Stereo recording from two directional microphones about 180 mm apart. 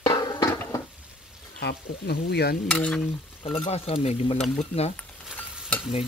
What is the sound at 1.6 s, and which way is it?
Speech, 65° left (ahead or behind).